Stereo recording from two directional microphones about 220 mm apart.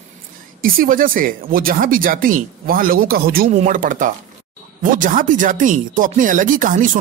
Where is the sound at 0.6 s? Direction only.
40° right (ahead or behind).